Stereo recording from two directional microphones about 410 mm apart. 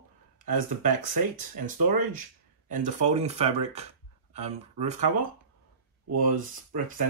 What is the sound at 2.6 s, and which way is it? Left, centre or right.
Speech, centre.